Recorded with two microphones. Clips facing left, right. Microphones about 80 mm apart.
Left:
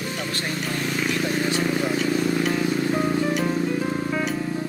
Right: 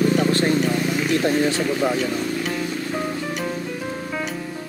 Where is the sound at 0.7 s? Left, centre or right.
Centre.